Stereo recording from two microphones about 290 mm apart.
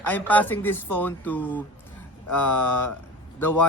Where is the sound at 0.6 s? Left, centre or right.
Centre.